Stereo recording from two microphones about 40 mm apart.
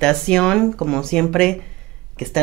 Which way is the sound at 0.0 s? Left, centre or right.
Centre.